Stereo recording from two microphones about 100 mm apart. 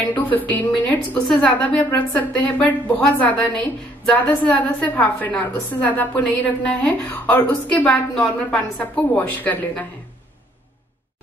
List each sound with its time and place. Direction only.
0.1 s a woman's voice: 15° left (ahead or behind)